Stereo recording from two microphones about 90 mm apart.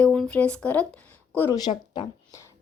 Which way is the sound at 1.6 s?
55° left (ahead or behind).